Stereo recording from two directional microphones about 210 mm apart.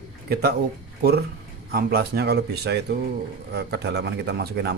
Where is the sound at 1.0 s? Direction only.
50° right (ahead or behind).